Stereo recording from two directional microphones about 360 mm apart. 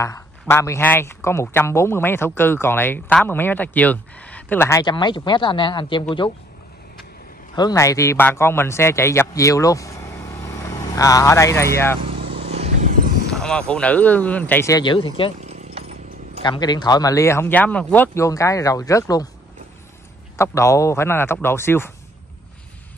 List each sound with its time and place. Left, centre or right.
0.0 s speech: centre
7.5 s a man's voice: centre
12.3 s vehicle: centre
13.3 s speech: centre
15.4 s a sound: centre
16.4 s speech: centre
20.3 s speech: centre